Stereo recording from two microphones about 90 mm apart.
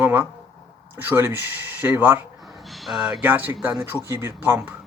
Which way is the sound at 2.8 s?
5° right (ahead or behind).